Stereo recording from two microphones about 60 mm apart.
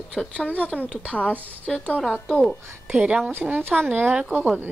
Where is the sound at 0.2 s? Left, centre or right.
Centre.